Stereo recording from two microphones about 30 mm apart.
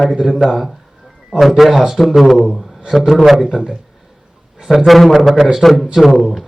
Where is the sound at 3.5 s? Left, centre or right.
Right.